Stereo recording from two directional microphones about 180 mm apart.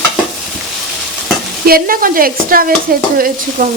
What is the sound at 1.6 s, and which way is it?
Stir, 55° right (ahead or behind).